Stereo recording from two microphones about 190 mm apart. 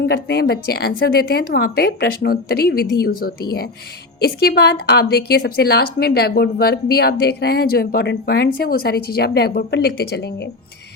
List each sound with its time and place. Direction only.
0.0 s a woman's voice: 60° left (ahead or behind)